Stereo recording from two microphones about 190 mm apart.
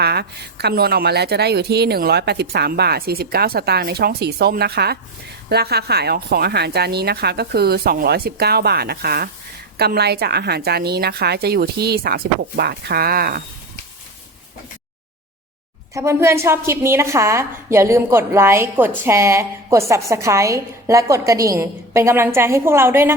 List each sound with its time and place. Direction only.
0.0 s a woman's voice: 60° right (ahead or behind)
16.0 s a woman's voice: 15° right (ahead or behind)